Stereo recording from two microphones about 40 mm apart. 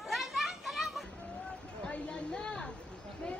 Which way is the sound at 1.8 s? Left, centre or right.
Left.